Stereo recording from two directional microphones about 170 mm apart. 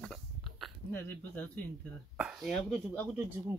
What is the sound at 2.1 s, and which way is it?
Speech, 5° right (ahead or behind).